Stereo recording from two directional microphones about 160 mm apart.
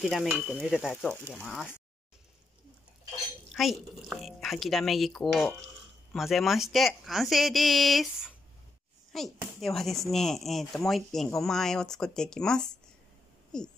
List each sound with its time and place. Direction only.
0.0 s speech: centre (ahead or behind)
3.5 s speech: centre (ahead or behind)